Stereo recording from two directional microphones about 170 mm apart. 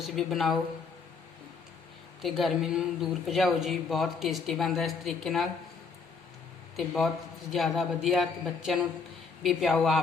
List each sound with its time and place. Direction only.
0.0 s speech: centre (ahead or behind)
2.2 s speech: centre (ahead or behind)
6.7 s speech: centre (ahead or behind)